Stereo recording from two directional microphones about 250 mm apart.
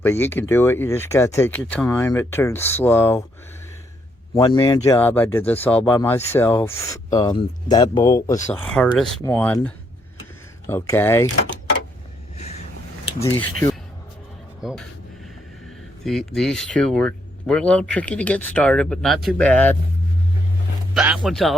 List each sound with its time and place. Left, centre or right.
0.0 s speech: centre
4.4 s speech: centre
12.4 s vehicle: left
13.1 s speech: centre
14.6 s speech: centre
16.0 s speech: centre
20.9 s speech: centre